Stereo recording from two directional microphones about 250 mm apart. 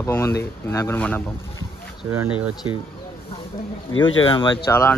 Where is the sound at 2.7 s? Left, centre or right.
Right.